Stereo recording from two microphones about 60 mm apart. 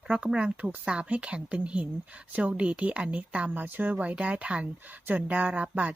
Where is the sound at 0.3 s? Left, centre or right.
Centre.